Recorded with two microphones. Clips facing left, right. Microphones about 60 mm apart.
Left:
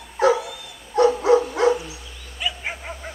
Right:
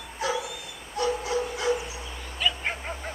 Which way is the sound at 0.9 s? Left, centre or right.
Left.